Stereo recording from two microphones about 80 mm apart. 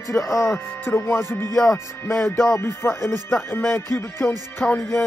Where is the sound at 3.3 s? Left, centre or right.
Left.